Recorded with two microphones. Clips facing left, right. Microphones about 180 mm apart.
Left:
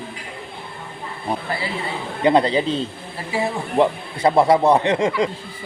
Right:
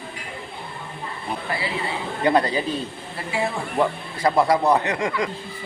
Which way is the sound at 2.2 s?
25° left (ahead or behind).